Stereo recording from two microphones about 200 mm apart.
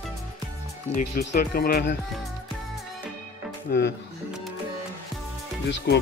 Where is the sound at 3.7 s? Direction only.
50° left (ahead or behind).